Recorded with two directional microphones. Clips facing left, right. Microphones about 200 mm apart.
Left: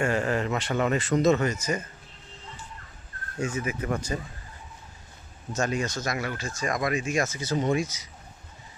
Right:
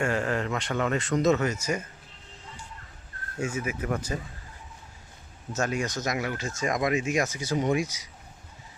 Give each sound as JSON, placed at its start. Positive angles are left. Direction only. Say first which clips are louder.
{"t": 0.0, "sound": "speech", "louder": "left 2 dB", "side_deg": 0}
{"t": 3.3, "sound": "speech", "louder": "left 1 dB", "side_deg": -10}
{"t": 5.5, "sound": "speech", "louder": "left 1 dB", "side_deg": -5}